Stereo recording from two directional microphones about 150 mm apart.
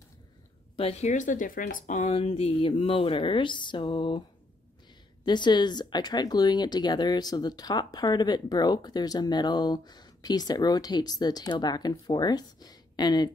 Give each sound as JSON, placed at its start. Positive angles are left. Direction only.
{"t": 0.7, "sound": "speech", "side_deg": 45}
{"t": 2.1, "sound": "speech", "side_deg": 40}
{"t": 5.2, "sound": "speech", "side_deg": 30}